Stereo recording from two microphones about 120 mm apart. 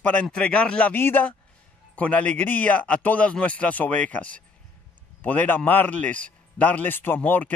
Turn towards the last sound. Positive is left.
turn(degrees=15)  # may be behind; listen again after turning